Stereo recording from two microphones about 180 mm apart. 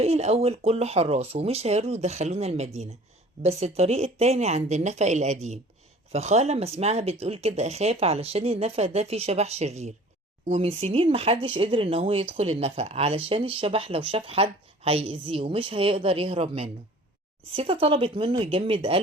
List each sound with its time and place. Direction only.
0.0 s speech: 35° right (ahead or behind)